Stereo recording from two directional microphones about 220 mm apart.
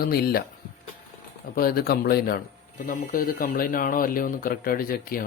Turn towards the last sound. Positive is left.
turn(degrees=40)  # may be behind; listen again after turning